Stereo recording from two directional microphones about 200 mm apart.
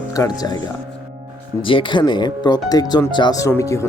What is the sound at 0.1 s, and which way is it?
Speech, 20° left (ahead or behind).